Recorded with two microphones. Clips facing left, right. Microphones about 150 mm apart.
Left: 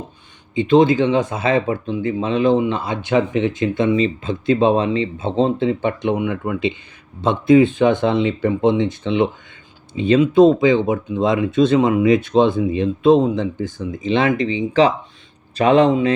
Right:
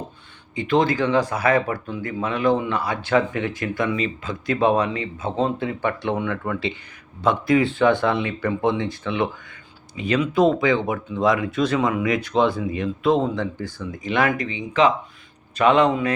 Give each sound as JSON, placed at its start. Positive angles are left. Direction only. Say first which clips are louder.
{"t": 0.5, "sound": "speech", "louder": "left 7 dB", "side_deg": 20}
{"t": 15.9, "sound": "speech", "louder": "left 6 dB", "side_deg": 25}